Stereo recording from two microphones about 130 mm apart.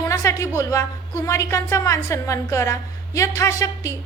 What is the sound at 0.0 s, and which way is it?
A woman's voice, 25° left (ahead or behind).